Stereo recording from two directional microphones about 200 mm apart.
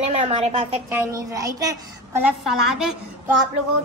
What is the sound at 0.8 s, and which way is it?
Speech, 15° right (ahead or behind).